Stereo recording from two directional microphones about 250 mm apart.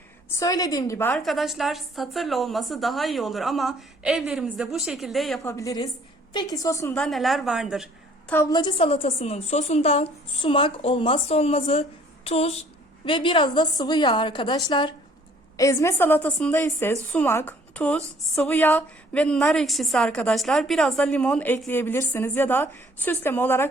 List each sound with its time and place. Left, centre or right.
0.3 s a woman's voice: centre
5.4 s a woman's voice: centre
8.3 s a woman's voice: centre